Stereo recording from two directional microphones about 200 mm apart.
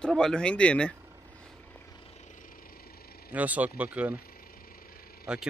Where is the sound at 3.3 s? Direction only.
10° right (ahead or behind).